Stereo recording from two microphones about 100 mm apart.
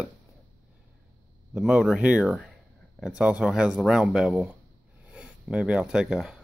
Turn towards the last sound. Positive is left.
turn(degrees=-5)  # may be behind; listen again after turning